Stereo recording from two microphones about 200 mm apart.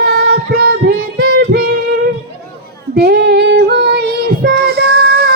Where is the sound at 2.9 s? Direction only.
55° right (ahead or behind).